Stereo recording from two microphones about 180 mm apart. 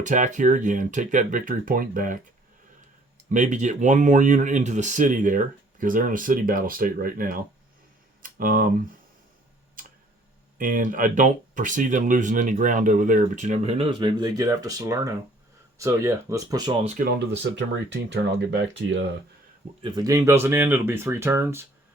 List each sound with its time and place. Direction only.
0.0 s speech: 45° right (ahead or behind)
3.2 s speech: 45° right (ahead or behind)
9.8 s tick-tock: 50° right (ahead or behind)
10.6 s speech: 50° right (ahead or behind); by 16.7 s 20° right (ahead or behind)
16.8 s speech: 50° right (ahead or behind)
17.2 s speech: 80° right
19.8 s speech: 20° right (ahead or behind)